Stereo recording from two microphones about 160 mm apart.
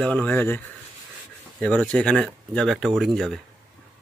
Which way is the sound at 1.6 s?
5° left (ahead or behind).